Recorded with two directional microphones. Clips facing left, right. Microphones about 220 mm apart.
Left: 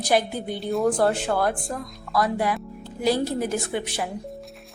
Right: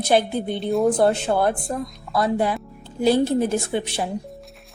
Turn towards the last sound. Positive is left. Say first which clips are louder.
# right 3 dB
turn(degrees=-25)  # may be behind; listen again after turning